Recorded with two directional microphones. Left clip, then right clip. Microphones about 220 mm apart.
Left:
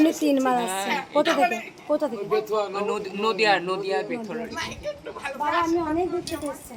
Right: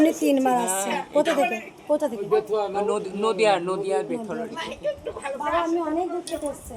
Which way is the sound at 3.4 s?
20° right (ahead or behind).